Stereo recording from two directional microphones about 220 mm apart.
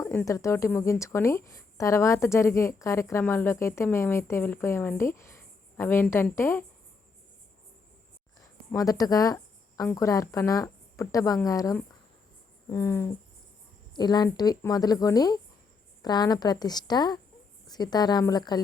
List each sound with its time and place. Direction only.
0.0 s a woman's voice: 10° left (ahead or behind)
8.4 s a sound: 15° left (ahead or behind)
9.9 s a woman's voice: 15° left (ahead or behind)